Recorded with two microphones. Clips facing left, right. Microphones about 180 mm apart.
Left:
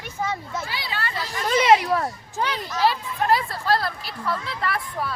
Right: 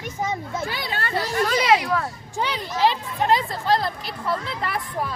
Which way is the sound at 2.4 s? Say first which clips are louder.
Right 1 dB; 15° right (ahead or behind).